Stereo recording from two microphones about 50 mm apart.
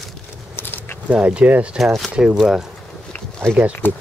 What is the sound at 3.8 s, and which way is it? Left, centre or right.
Speech, left.